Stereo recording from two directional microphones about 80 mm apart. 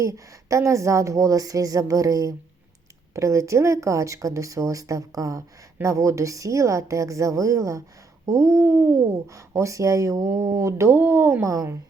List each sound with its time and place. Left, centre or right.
0.0 s speech: right
11.4 s speech: right